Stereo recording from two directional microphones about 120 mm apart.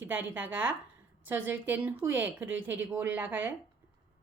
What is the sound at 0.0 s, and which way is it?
A woman's voice, 15° right (ahead or behind).